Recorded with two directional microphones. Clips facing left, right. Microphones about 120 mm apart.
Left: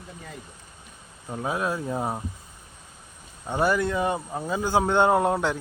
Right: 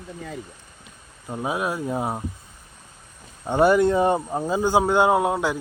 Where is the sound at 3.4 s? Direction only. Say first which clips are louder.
Right 6 dB; 25° right (ahead or behind).